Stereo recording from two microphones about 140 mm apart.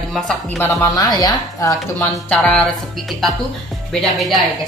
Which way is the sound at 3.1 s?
Centre (ahead or behind).